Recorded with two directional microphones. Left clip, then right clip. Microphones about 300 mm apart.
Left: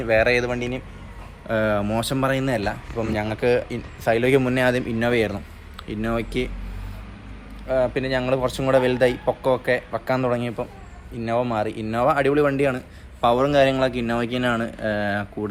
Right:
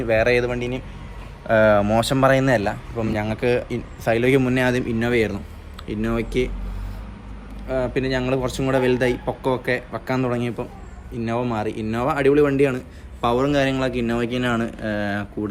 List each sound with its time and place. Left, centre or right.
0.0 s speech: centre
7.7 s speech: centre